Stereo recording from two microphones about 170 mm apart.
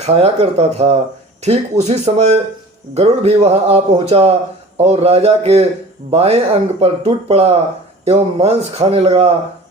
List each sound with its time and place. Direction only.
0.0 s speech: 35° right (ahead or behind)